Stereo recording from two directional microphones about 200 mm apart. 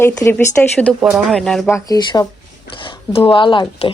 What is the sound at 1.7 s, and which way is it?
Speech, 20° left (ahead or behind).